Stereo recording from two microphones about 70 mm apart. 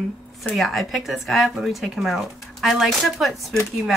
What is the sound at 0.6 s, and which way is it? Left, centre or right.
Speech, centre.